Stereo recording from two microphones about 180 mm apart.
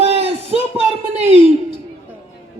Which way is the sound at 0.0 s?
35° right (ahead or behind).